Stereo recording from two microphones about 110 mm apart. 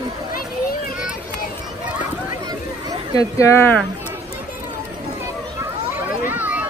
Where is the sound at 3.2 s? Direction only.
30° left (ahead or behind).